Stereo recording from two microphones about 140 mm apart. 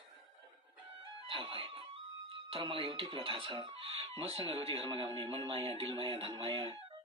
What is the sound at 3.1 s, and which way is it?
Speech, 40° right (ahead or behind).